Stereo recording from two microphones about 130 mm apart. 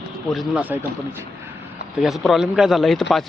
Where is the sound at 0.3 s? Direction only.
10° right (ahead or behind).